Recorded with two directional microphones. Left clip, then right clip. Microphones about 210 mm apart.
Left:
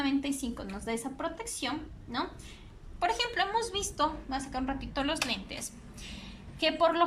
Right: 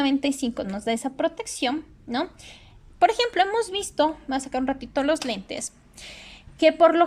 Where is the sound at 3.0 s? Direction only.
35° right (ahead or behind).